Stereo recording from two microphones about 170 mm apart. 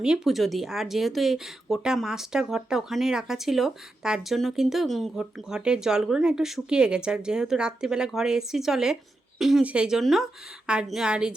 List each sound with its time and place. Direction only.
0.0 s speech: 5° right (ahead or behind)